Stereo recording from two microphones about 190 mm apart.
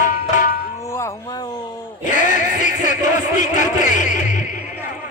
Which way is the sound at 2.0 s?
40° left (ahead or behind).